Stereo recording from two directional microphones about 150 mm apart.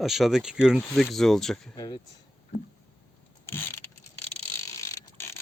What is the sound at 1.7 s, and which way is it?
Speech, 25° left (ahead or behind).